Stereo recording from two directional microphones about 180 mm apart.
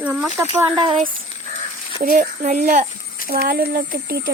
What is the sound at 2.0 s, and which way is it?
Speech, 50° right (ahead or behind).